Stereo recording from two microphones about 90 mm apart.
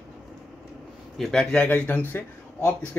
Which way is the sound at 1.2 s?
10° left (ahead or behind).